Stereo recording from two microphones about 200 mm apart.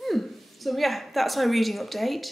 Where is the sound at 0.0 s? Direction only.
Centre (ahead or behind).